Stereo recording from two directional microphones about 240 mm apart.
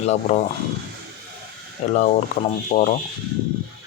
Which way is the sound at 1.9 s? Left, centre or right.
Left.